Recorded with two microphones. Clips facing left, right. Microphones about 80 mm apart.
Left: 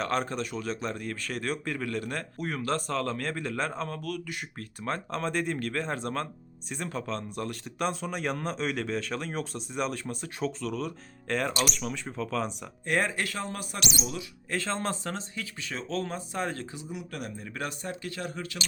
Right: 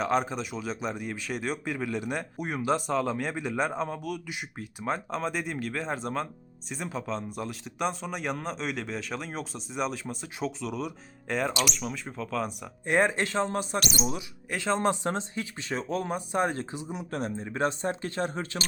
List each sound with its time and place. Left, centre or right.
0.0 s speech: centre
12.8 s speech: right
13.7 s speech: right
14.0 s speech: right
14.5 s speech: centre; by 18.6 s right